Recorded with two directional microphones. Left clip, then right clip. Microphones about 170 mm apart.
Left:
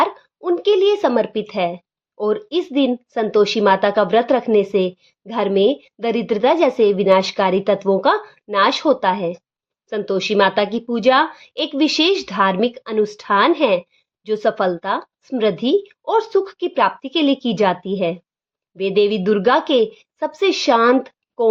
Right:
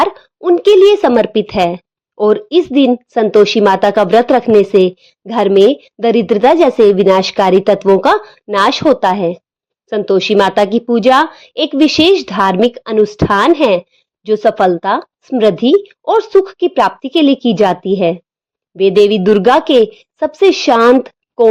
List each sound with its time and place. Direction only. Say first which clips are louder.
0.0 s a woman's voice: right 6 dB; 40° right (ahead or behind)